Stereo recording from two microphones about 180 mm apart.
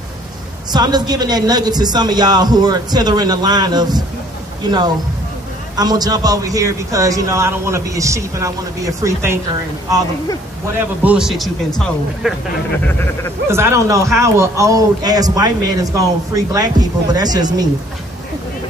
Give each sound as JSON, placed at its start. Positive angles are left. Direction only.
{"t": 0.7, "sound": "a man's voice", "side_deg": -20}
{"t": 11.1, "sound": "speech", "side_deg": -5}
{"t": 12.8, "sound": "a sound", "side_deg": 10}
{"t": 13.5, "sound": "a man's voice", "side_deg": -15}